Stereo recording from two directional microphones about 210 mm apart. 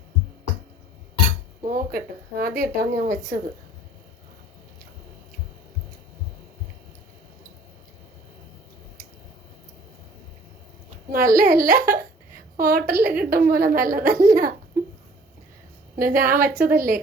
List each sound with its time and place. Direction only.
1.7 s speech: 45° right (ahead or behind)
11.1 s speech: 45° right (ahead or behind)
16.0 s speech: 40° right (ahead or behind)